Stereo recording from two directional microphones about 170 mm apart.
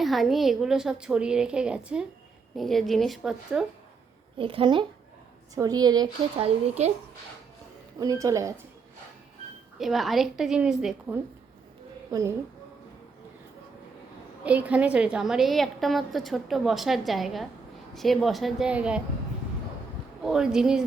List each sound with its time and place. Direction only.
0.0 s a woman's voice: centre (ahead or behind)
4.4 s a woman's voice: 30° right (ahead or behind)
6.4 s a woman's voice: 40° right (ahead or behind)
7.9 s a woman's voice: 20° right (ahead or behind)
9.7 s a woman's voice: centre (ahead or behind)
14.4 s a woman's voice: 10° right (ahead or behind)
20.2 s a woman's voice: 5° right (ahead or behind)